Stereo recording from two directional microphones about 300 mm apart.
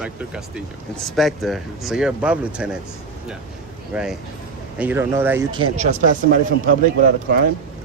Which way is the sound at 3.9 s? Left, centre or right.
Centre.